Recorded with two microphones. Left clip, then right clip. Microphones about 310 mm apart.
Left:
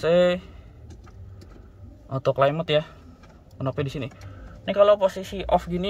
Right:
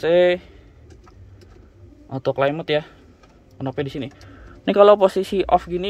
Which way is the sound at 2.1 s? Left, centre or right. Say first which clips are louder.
Right 1 dB; centre.